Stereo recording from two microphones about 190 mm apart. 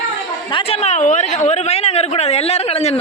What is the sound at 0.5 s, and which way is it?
Speech, 35° left (ahead or behind).